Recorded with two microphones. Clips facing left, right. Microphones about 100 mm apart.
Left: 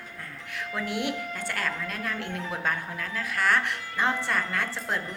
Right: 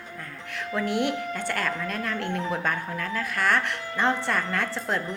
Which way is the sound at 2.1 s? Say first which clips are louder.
Right 5 dB; 55° right (ahead or behind).